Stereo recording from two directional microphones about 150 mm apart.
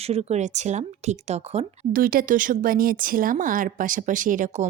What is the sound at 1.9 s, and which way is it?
Speech, 70° right (ahead or behind).